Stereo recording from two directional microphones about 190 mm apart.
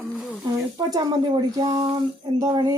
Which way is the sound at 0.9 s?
20° right (ahead or behind).